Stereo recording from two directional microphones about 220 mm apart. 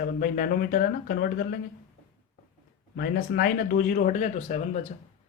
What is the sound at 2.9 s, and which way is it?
Speech, 45° left (ahead or behind).